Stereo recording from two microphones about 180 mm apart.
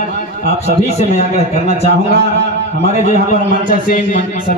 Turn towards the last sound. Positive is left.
turn(degrees=35)  # may be behind; listen again after turning